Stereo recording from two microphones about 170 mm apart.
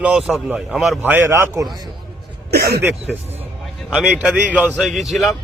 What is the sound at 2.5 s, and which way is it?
Speech, 65° right (ahead or behind).